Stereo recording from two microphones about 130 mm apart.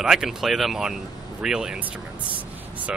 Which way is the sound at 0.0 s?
5° right (ahead or behind).